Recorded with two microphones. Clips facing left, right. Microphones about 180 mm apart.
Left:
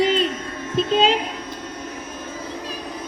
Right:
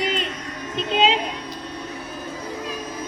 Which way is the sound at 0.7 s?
40° left (ahead or behind).